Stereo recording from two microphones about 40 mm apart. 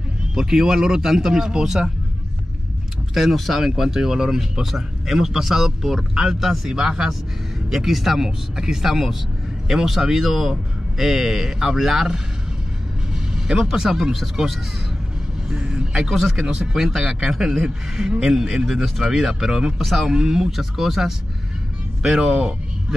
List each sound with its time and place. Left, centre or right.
0.3 s speech: centre
3.2 s speech: centre
13.1 s speech: centre
15.6 s a man's voice: centre
16.0 s speech: centre
19.8 s speech: centre
20.1 s speech: centre